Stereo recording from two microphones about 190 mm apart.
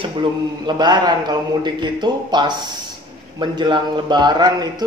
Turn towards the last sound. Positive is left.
turn(degrees=-20)  # may be behind; listen again after turning